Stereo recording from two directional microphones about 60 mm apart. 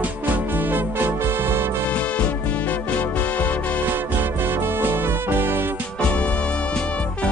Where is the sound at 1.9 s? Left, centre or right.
Left.